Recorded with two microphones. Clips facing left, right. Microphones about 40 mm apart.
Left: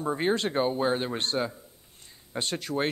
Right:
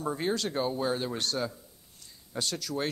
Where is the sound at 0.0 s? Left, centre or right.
Left.